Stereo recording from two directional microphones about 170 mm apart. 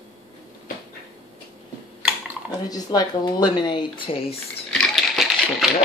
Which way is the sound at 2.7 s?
25° left (ahead or behind).